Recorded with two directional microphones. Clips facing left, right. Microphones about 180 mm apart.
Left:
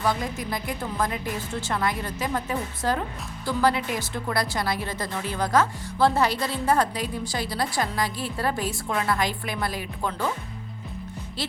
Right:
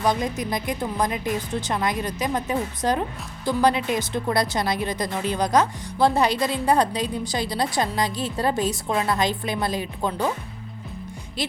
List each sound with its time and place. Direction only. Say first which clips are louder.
0.0 s a woman's voice: right 3 dB; 20° right (ahead or behind)
11.4 s a woman's voice: right 4 dB; 15° right (ahead or behind)